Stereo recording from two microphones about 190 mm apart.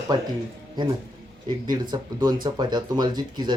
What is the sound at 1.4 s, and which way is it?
Speech, 20° right (ahead or behind).